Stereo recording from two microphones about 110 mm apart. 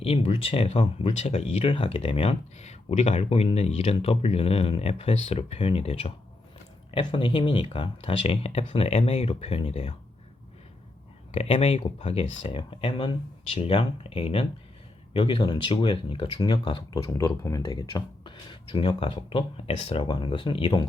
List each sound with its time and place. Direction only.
0.0 s speech: 60° left (ahead or behind)
6.9 s speech: 50° left (ahead or behind)
11.3 s speech: 65° left (ahead or behind)
15.1 s speech: 45° left (ahead or behind)
16.3 s speech: 40° left (ahead or behind)
17.0 s speech: 30° left (ahead or behind); by 20.1 s 65° left (ahead or behind)
20.1 s speech: 45° left (ahead or behind)